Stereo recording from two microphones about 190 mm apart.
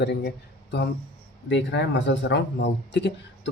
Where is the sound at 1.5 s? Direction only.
70° left (ahead or behind).